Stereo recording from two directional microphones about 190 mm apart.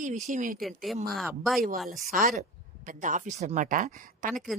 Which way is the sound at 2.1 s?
45° right (ahead or behind).